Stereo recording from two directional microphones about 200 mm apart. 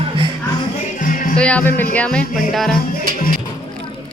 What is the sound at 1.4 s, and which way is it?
Speech, 5° left (ahead or behind).